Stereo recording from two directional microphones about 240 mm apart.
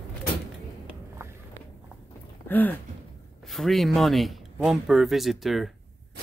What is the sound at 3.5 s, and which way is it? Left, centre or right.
Speech, centre.